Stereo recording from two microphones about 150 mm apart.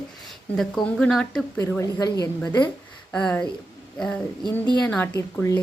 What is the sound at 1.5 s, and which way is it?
Speech, 20° left (ahead or behind).